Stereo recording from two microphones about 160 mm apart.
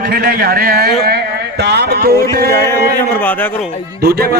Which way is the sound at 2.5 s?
15° left (ahead or behind).